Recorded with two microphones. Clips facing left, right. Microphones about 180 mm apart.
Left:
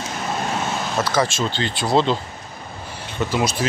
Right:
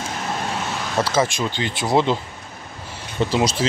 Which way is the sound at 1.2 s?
15° right (ahead or behind).